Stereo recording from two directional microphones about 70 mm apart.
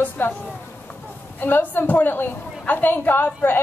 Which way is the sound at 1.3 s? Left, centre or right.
Left.